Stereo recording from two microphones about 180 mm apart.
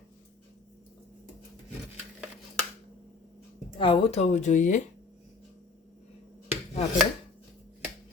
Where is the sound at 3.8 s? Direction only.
35° left (ahead or behind).